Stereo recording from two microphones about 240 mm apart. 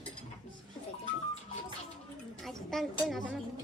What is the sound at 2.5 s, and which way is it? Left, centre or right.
Speech, centre.